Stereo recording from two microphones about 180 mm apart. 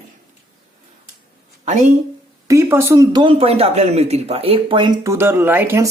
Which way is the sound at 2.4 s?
15° right (ahead or behind).